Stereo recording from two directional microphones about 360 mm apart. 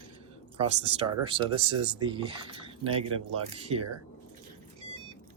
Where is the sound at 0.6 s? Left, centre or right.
Centre.